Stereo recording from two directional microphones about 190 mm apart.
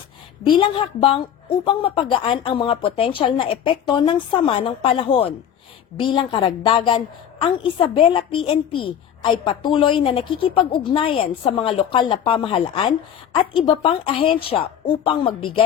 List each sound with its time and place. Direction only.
0.4 s a woman's voice: 25° left (ahead or behind)
8.0 s a woman's voice: 25° left (ahead or behind)